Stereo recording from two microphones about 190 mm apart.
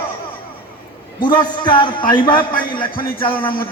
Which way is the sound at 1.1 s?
25° left (ahead or behind).